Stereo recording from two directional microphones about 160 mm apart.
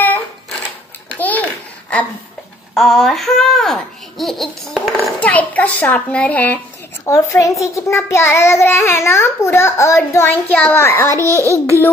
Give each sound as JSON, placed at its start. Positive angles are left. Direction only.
{"t": 0.0, "sound": "a sound", "side_deg": 10}
{"t": 1.0, "sound": "babbling", "side_deg": 10}
{"t": 2.7, "sound": "a child's voice", "side_deg": 0}
{"t": 7.1, "sound": "a child's voice", "side_deg": 20}
{"t": 11.1, "sound": "a child's voice", "side_deg": -20}